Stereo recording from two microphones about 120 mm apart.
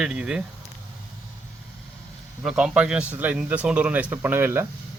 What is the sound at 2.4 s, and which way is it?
A man's voice, 5° right (ahead or behind).